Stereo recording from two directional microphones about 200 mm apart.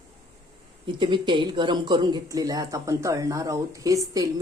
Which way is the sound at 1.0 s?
25° right (ahead or behind).